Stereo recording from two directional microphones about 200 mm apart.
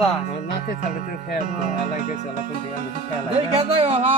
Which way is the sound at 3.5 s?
30° right (ahead or behind).